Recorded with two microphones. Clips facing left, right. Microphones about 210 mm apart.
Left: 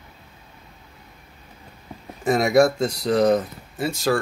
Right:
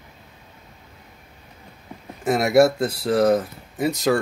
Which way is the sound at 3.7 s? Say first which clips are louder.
Right 2 dB; 20° right (ahead or behind).